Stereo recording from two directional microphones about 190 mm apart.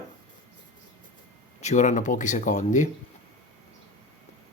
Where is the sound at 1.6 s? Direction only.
40° left (ahead or behind).